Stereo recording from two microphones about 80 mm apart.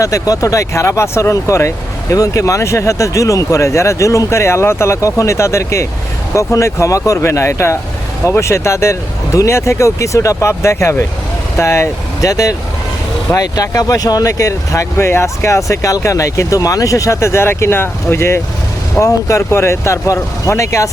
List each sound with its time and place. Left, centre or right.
0.0 s speech: left
12.3 s speech: left